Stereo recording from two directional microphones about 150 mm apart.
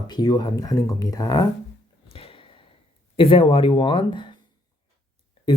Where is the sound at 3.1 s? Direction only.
35° left (ahead or behind).